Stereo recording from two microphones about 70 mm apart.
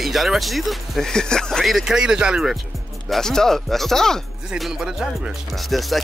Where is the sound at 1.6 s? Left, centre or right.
Centre.